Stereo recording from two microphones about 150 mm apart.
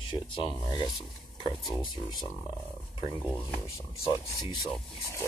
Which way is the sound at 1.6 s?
Centre (ahead or behind).